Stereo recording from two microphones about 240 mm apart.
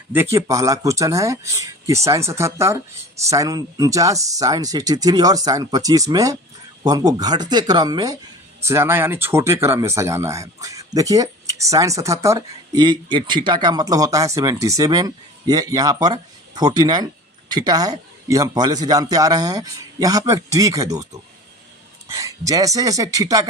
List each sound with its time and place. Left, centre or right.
0.1 s speech: centre